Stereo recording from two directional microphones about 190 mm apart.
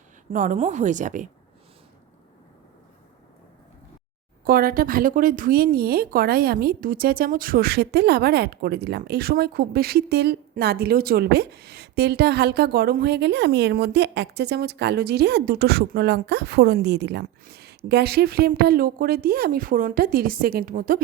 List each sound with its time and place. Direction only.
0.3 s a woman's voice: 40° right (ahead or behind)
4.4 s speech: 50° right (ahead or behind)